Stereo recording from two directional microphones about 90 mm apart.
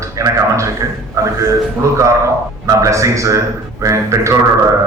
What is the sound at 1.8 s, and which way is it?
A man's voice, 35° right (ahead or behind).